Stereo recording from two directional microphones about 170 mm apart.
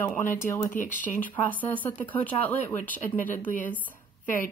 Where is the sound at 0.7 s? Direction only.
50° left (ahead or behind).